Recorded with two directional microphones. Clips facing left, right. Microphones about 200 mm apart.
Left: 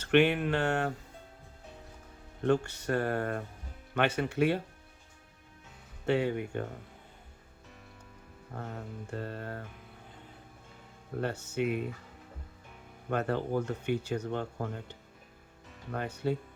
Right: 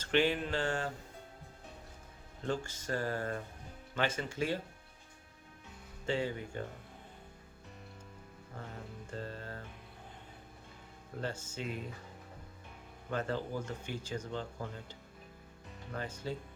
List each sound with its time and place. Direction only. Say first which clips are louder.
0.0 s speech: left 6 dB; 65° left (ahead or behind)
2.4 s speech: left 9 dB; 65° left (ahead or behind)
6.1 s speech: left 6 dB; 65° left (ahead or behind)
8.5 s speech: left 6 dB; 55° left (ahead or behind)
11.2 s speech: left 8 dB; 65° left (ahead or behind)
13.1 s speech: left 5 dB; 60° left (ahead or behind)